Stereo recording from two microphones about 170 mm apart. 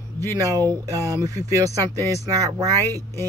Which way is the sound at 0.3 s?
20° right (ahead or behind).